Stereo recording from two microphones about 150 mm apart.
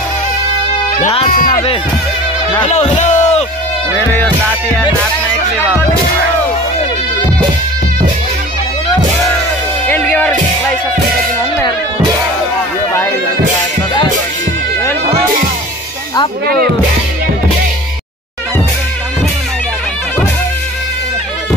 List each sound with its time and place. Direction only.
1.3 s speech: 65° left (ahead or behind)
2.6 s a sound: 50° left (ahead or behind)
9.8 s music: 10° left (ahead or behind)